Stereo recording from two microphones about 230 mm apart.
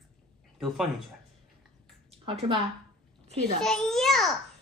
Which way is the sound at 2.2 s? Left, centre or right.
Right.